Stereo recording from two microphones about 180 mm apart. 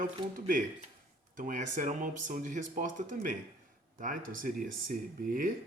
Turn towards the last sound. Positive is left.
turn(degrees=-50)  # may be behind; listen again after turning